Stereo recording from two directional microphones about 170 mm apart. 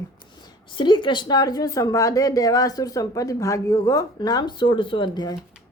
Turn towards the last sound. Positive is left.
turn(degrees=25)  # may be behind; listen again after turning